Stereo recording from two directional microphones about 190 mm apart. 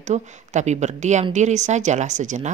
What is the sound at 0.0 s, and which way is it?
Speech, 40° right (ahead or behind).